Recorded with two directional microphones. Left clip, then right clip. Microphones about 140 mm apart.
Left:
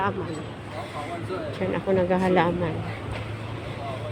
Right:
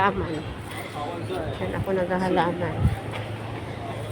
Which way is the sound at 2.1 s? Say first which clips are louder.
Even; 65° left (ahead or behind).